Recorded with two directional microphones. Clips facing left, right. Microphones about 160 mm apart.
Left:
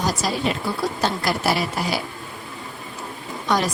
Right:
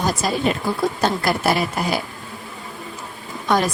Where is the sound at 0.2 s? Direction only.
50° right (ahead or behind).